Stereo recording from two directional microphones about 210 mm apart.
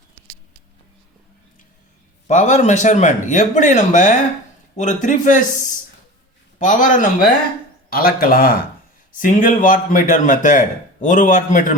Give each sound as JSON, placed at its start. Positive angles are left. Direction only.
{"t": 2.2, "sound": "a man's voice", "side_deg": 35}
{"t": 6.6, "sound": "a man's voice", "side_deg": 40}